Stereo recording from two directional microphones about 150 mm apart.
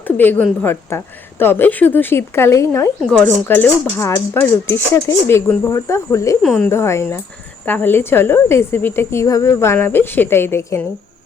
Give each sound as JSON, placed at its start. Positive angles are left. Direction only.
{"t": 0.2, "sound": "speech", "side_deg": 15}
{"t": 3.0, "sound": "speech", "side_deg": 10}
{"t": 6.4, "sound": "speech", "side_deg": 0}
{"t": 6.7, "sound": "speech", "side_deg": 20}